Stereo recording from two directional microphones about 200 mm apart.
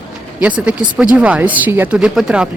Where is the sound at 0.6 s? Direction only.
5° right (ahead or behind).